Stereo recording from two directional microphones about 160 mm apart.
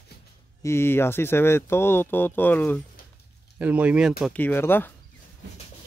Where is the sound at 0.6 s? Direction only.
15° left (ahead or behind).